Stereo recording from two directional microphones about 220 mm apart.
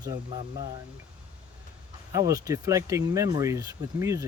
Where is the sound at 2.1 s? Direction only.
15° right (ahead or behind).